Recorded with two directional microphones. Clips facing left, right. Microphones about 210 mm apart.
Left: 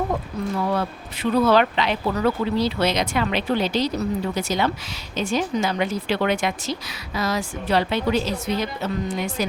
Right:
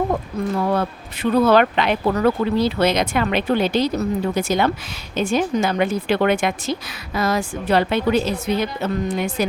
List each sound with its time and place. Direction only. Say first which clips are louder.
0.7 s a woman's voice: right 3 dB; 50° right (ahead or behind)